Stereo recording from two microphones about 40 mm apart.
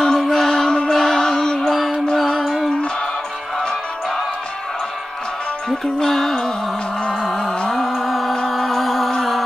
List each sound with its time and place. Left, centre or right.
0.0 s music: centre
1.6 s music: centre
5.9 s music: centre